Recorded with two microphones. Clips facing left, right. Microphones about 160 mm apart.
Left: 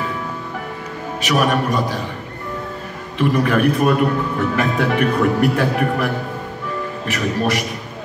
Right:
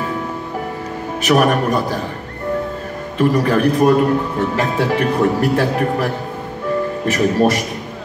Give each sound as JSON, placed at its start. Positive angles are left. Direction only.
{"t": 1.2, "sound": "a man's voice", "side_deg": -50}
{"t": 3.2, "sound": "a man's voice", "side_deg": -35}